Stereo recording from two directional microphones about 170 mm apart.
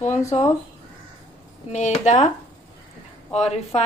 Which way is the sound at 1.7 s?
45° left (ahead or behind).